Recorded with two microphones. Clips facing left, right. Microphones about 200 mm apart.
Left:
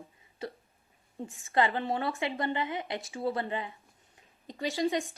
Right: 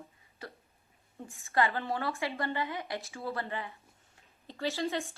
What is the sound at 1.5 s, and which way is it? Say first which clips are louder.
A woman's voice: left 2 dB; 15° left (ahead or behind).